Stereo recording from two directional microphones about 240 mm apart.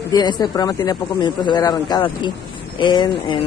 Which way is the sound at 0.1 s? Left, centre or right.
Centre.